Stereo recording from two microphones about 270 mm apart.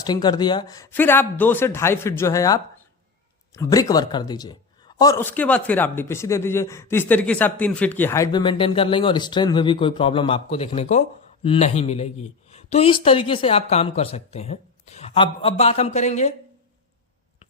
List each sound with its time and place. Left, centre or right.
0.0 s speech: centre